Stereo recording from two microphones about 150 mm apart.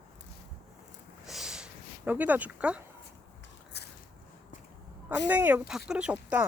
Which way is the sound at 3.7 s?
90° left.